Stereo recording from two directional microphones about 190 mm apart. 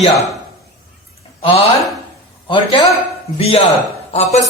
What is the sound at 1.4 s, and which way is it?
A man's voice, 30° left (ahead or behind).